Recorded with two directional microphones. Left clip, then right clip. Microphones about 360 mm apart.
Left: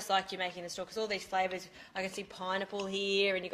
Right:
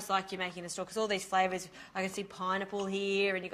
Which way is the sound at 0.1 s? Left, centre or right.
Centre.